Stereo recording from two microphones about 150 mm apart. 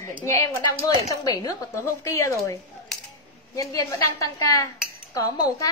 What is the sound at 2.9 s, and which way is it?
Coin, 5° left (ahead or behind).